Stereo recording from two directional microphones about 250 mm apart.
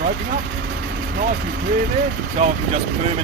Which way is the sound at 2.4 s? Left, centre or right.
Right.